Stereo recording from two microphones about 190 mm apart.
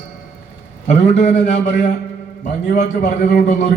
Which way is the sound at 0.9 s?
35° left (ahead or behind).